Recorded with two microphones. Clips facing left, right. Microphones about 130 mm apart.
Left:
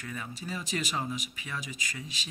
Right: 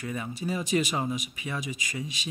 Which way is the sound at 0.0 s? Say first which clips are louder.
Right 7 dB; 20° right (ahead or behind).